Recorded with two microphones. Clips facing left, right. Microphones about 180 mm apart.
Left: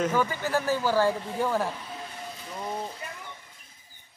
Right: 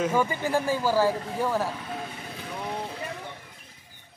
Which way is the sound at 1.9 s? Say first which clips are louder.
Right 3 dB; 65° right (ahead or behind).